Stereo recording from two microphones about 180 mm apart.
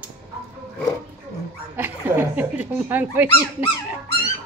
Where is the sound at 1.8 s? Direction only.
10° right (ahead or behind).